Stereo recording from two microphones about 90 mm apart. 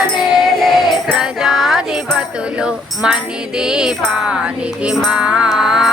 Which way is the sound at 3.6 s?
10° right (ahead or behind).